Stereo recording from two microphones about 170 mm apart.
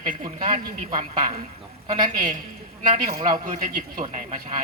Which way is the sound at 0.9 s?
45° right (ahead or behind).